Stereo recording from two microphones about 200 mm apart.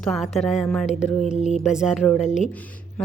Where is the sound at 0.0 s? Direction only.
5° left (ahead or behind).